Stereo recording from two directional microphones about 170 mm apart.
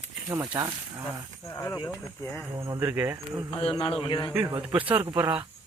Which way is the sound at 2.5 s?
20° right (ahead or behind).